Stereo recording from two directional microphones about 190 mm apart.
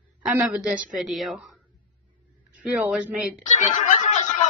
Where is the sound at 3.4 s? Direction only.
40° left (ahead or behind).